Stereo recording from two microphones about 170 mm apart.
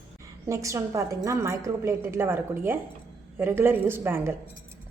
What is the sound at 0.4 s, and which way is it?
A woman's voice, 20° right (ahead or behind).